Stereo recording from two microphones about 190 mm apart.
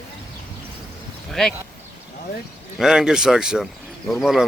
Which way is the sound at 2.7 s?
5° right (ahead or behind).